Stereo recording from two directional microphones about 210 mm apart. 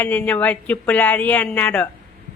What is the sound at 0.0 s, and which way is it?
A woman's voice, 10° left (ahead or behind).